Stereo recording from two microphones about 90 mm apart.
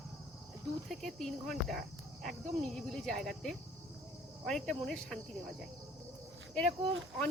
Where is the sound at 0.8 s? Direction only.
Centre (ahead or behind).